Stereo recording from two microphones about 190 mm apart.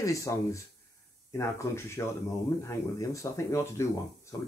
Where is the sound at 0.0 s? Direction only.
15° left (ahead or behind).